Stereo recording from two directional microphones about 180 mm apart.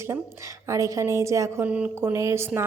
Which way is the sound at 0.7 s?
15° right (ahead or behind).